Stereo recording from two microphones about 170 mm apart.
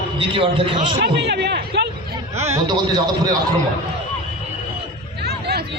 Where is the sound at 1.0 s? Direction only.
80° right.